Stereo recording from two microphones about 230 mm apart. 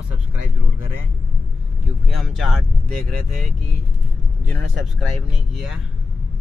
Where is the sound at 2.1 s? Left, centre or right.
Centre.